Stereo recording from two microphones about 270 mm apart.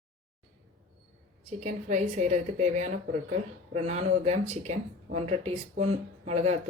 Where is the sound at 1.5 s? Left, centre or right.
Right.